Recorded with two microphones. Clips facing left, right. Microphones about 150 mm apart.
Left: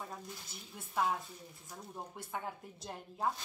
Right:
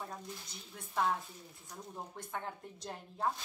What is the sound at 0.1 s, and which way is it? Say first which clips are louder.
Speech: right 1 dB; 5° left (ahead or behind).